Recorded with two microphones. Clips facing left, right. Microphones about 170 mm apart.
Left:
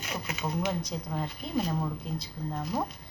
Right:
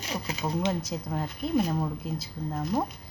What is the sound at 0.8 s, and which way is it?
Speech, 5° right (ahead or behind).